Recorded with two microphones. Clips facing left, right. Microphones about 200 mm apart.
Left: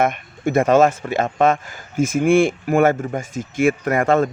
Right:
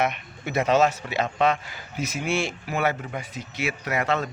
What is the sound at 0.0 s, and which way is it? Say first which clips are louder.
Speech: left 7 dB; 50° left (ahead or behind).